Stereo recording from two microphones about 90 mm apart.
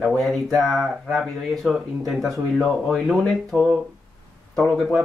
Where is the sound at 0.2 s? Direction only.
5° left (ahead or behind).